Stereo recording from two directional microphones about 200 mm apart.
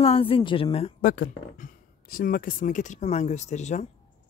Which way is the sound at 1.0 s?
45° left (ahead or behind).